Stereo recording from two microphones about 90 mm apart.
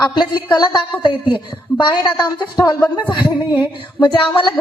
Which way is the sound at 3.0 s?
60° left (ahead or behind).